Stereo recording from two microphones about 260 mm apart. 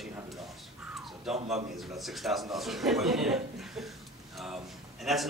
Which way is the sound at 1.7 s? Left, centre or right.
Centre.